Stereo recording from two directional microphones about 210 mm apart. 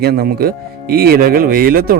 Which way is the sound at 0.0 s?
50° right (ahead or behind).